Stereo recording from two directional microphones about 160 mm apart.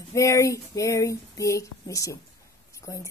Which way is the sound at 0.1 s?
20° left (ahead or behind).